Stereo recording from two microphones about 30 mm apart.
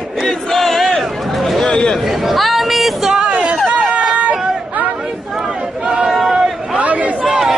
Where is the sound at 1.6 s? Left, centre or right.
Left.